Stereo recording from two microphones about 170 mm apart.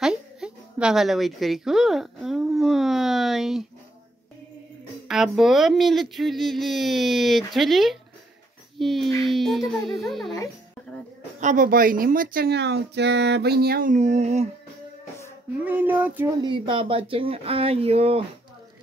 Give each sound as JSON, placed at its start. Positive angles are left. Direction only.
{"t": 0.0, "sound": "a sound", "side_deg": -5}
{"t": 5.0, "sound": "speech", "side_deg": 0}
{"t": 11.3, "sound": "speech", "side_deg": -50}
{"t": 13.9, "sound": "speech", "side_deg": -40}
{"t": 15.6, "sound": "a sound", "side_deg": -10}
{"t": 16.3, "sound": "speech", "side_deg": -25}